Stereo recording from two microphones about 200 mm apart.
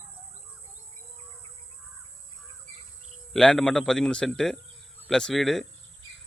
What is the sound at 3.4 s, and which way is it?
Speech, centre (ahead or behind).